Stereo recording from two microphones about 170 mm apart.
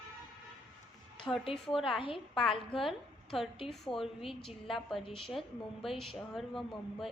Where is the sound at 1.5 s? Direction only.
Centre (ahead or behind).